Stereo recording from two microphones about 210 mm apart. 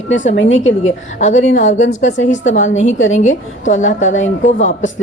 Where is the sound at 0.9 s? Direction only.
35° left (ahead or behind).